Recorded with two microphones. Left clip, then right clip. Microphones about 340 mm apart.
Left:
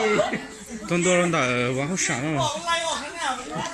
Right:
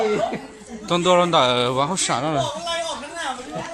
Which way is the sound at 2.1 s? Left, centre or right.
Right.